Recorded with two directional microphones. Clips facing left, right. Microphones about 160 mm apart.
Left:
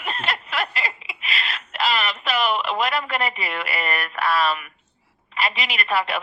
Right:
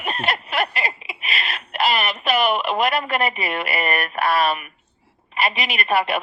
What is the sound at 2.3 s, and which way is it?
Speech, 55° right (ahead or behind).